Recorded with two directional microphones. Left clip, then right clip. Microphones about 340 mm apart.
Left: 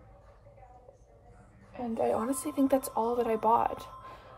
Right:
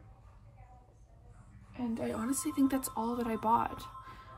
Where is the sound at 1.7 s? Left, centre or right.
Centre.